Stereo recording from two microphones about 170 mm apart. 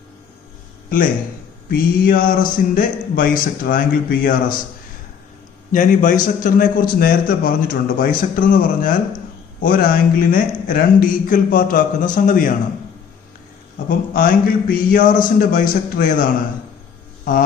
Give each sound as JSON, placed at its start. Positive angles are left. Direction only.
{"t": 1.7, "sound": "speech", "side_deg": 55}
{"t": 5.7, "sound": "a man's voice", "side_deg": 50}
{"t": 13.8, "sound": "speech", "side_deg": 55}